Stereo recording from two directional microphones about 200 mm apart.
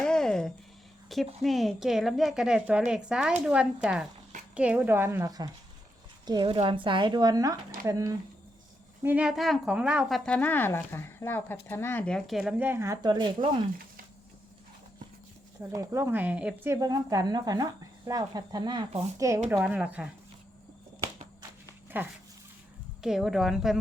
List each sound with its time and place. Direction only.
0.0 s a sound: 5° left (ahead or behind)
1.1 s speech: centre (ahead or behind); by 8.1 s 15° right (ahead or behind)
9.0 s speech: 5° right (ahead or behind); by 13.6 s 25° right (ahead or behind)
15.7 s speech: 15° right (ahead or behind)
19.6 s speech: 5° right (ahead or behind)
21.9 s speech: 10° right (ahead or behind)